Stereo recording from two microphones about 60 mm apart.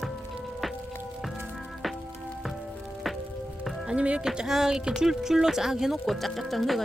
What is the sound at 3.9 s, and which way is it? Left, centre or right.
Music, centre.